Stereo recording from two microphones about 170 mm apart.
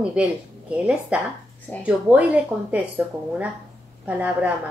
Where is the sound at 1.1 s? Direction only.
5° right (ahead or behind).